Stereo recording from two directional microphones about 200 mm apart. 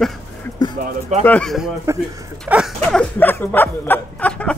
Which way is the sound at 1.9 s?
15° right (ahead or behind).